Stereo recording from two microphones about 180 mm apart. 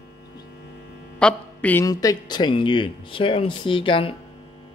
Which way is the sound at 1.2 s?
10° left (ahead or behind).